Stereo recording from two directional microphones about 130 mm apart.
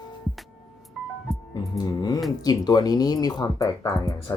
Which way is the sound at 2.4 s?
30° left (ahead or behind).